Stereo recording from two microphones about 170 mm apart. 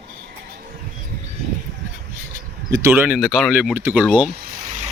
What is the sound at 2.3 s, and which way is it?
Speech, 15° right (ahead or behind).